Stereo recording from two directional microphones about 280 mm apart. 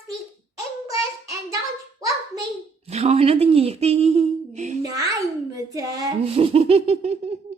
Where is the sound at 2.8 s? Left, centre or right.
Right.